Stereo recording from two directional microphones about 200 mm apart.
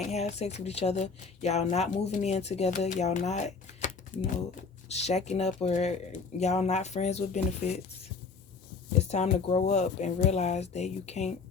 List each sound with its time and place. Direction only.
0.0 s speech: 35° left (ahead or behind)
4.1 s speech: 10° left (ahead or behind)
4.9 s speech: 30° left (ahead or behind)
9.0 s speech: 35° left (ahead or behind)